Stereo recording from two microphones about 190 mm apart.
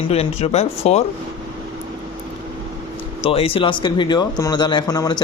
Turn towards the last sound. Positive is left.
turn(degrees=20)  # may be behind; listen again after turning